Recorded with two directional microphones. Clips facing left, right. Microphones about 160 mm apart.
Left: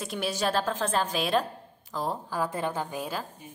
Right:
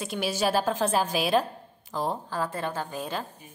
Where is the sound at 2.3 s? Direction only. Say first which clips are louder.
Left 1 dB; 15° left (ahead or behind).